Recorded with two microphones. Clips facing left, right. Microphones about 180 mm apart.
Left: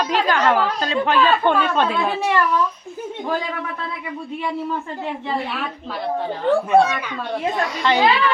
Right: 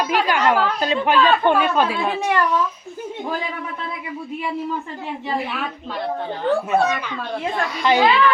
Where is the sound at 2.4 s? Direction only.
Centre (ahead or behind).